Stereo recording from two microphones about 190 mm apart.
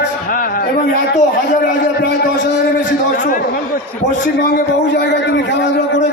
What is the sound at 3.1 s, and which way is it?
A man's voice, 45° left (ahead or behind).